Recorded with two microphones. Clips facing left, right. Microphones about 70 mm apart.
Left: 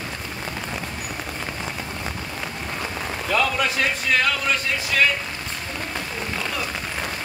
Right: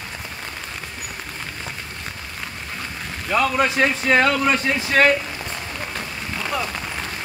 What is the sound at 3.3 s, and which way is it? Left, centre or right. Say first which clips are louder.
Speech: right 3 dB; right.